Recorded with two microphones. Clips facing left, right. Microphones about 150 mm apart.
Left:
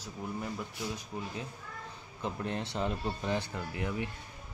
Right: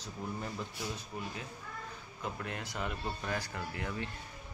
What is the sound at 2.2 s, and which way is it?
Speech, 30° left (ahead or behind).